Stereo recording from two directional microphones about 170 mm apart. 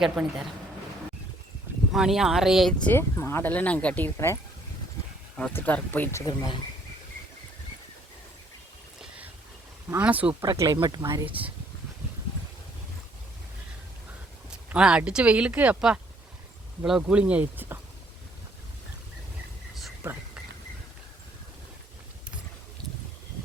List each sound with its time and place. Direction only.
0.0 s speech: 5° right (ahead or behind)
1.9 s speech: centre (ahead or behind)
2.9 s speech: 15° left (ahead or behind)
5.4 s speech: 10° left (ahead or behind); by 6.6 s 25° left (ahead or behind)
9.9 s speech: 10° right (ahead or behind)
10.4 s speech: 20° right (ahead or behind)
14.5 s speech: 5° right (ahead or behind)